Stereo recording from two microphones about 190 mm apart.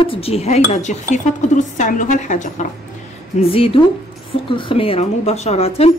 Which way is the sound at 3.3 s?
30° left (ahead or behind).